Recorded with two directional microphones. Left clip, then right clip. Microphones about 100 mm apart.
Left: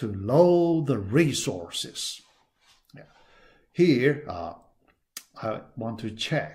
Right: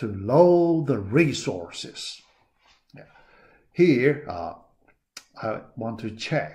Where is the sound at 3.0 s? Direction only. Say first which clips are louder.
Right 3 dB; 45° left (ahead or behind).